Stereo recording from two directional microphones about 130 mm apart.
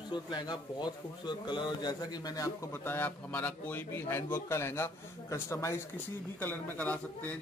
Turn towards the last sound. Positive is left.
turn(degrees=10)  # may be behind; listen again after turning